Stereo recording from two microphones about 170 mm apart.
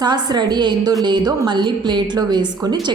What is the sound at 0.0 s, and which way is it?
A woman's voice, 25° right (ahead or behind).